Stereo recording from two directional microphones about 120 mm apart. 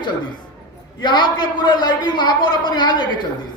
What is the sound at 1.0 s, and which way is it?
A man's voice, 35° left (ahead or behind).